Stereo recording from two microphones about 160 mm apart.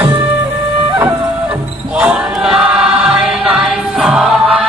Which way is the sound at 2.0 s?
5° right (ahead or behind).